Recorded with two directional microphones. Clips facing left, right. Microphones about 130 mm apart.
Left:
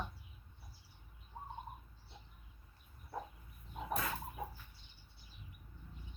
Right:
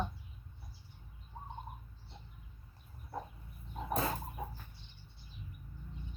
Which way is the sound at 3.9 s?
30° right (ahead or behind).